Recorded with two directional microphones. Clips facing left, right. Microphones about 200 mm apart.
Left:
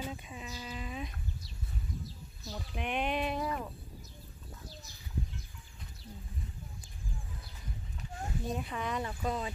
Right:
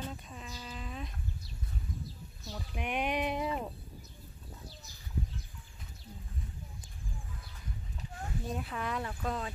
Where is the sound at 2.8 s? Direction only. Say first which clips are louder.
Even; 10° right (ahead or behind).